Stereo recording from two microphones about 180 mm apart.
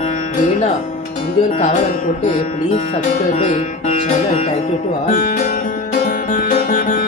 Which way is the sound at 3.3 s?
40° left (ahead or behind).